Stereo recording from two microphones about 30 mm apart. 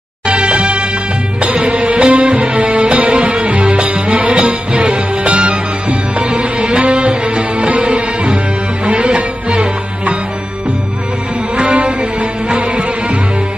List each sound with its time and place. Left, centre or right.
0.3 s music: right
11.5 s music: right